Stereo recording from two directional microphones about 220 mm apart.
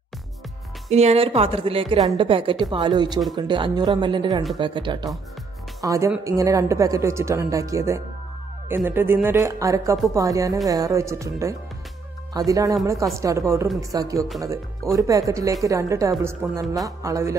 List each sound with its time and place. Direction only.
0.8 s a woman's voice: 30° right (ahead or behind); by 17.4 s 15° right (ahead or behind)